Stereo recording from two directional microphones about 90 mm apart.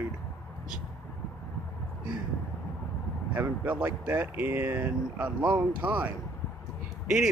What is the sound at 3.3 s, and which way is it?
Speech, 20° right (ahead or behind).